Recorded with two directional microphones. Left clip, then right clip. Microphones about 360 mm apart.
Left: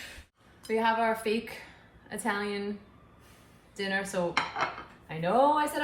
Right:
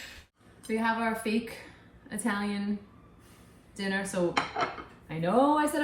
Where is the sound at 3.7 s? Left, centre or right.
Centre.